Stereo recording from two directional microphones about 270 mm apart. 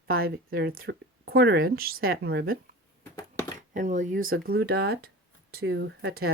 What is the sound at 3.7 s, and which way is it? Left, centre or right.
Speech, right.